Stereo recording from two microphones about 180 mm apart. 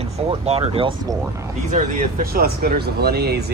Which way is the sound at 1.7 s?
50° right (ahead or behind).